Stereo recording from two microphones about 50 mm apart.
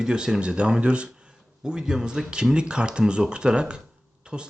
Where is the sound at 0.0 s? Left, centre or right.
Centre.